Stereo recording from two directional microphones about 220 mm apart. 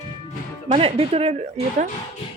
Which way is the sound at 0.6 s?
25° right (ahead or behind).